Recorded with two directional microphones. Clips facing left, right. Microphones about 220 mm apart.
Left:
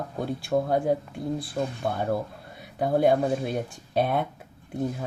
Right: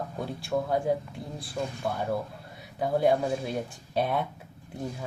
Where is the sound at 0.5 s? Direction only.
40° left (ahead or behind).